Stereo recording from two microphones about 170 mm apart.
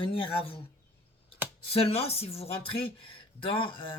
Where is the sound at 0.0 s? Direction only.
30° left (ahead or behind).